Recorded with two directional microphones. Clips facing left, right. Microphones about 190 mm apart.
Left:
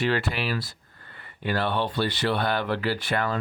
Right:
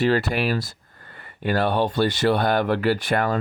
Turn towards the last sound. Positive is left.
turn(degrees=-45)  # may be behind; listen again after turning